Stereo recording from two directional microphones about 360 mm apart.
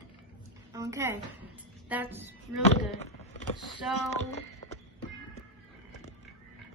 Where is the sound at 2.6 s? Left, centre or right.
Centre.